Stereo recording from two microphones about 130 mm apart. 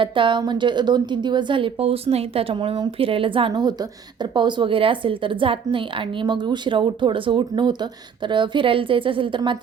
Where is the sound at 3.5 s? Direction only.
30° right (ahead or behind).